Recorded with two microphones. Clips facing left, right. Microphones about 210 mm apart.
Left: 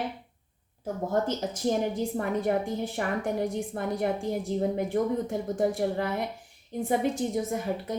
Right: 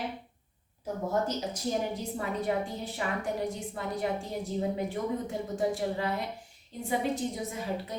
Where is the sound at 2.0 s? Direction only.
50° left (ahead or behind).